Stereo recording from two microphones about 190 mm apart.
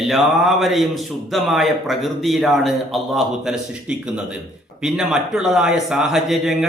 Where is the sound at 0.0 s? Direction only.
Centre (ahead or behind).